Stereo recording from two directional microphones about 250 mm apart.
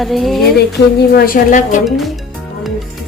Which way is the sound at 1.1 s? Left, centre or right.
Left.